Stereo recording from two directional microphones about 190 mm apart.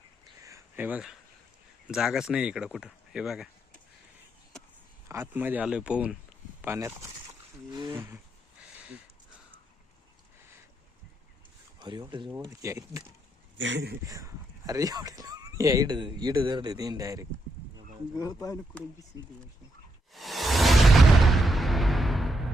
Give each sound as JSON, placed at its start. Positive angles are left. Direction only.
{"t": 0.4, "sound": "a sound", "side_deg": -15}
{"t": 1.9, "sound": "speech", "side_deg": 0}
{"t": 5.0, "sound": "a man's voice", "side_deg": -10}
{"t": 11.8, "sound": "a man's voice", "side_deg": -20}
{"t": 13.6, "sound": "speech", "side_deg": -70}
{"t": 14.1, "sound": "speech", "side_deg": -15}
{"t": 18.2, "sound": "speech", "side_deg": 20}
{"t": 20.1, "sound": "music", "side_deg": 0}